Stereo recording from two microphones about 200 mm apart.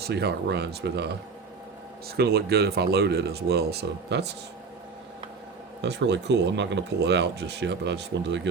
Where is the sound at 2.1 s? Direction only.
55° right (ahead or behind).